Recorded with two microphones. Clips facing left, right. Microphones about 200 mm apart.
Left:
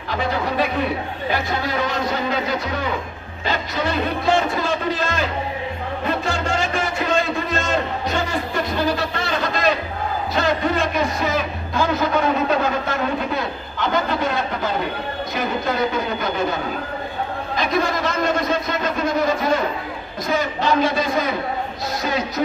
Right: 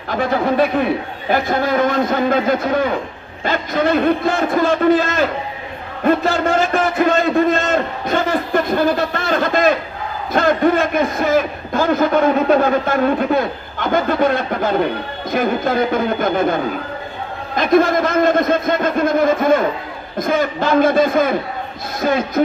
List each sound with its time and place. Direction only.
1.3 s a man's voice: 50° right (ahead or behind)
6.4 s a sound: 55° right (ahead or behind)
10.3 s a man's voice: 50° right (ahead or behind)
17.6 s a man's voice: 50° right (ahead or behind)